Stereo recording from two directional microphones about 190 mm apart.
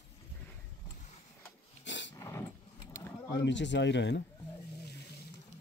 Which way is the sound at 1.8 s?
70° left (ahead or behind).